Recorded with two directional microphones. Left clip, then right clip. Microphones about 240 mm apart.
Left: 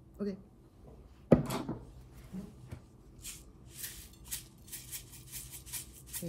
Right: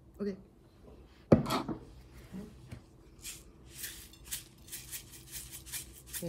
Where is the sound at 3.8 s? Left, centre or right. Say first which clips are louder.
Right 2 dB; centre.